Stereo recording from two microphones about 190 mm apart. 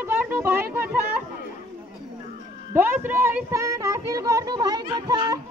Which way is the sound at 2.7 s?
10° right (ahead or behind).